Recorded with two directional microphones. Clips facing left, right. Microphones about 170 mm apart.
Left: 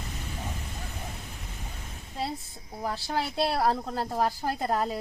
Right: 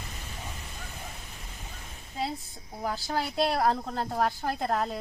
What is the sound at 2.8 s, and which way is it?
Speech, centre (ahead or behind).